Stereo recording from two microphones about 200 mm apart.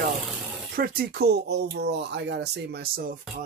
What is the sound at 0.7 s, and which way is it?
Speech, 45° right (ahead or behind).